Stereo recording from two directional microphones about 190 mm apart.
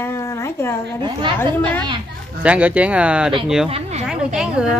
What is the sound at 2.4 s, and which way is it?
Speech, 5° right (ahead or behind).